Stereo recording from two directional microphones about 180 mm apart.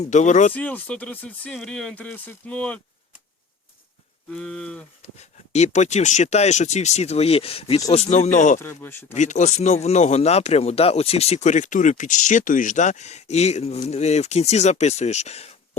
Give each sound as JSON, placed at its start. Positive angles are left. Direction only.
{"t": 0.0, "sound": "speech", "side_deg": 40}
{"t": 0.5, "sound": "speech", "side_deg": 10}
{"t": 4.3, "sound": "a sound", "side_deg": 5}
{"t": 5.0, "sound": "speech", "side_deg": 40}
{"t": 8.5, "sound": "speech", "side_deg": 15}
{"t": 9.1, "sound": "speech", "side_deg": 40}